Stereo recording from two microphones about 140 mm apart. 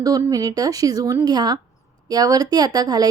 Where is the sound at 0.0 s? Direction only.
25° right (ahead or behind).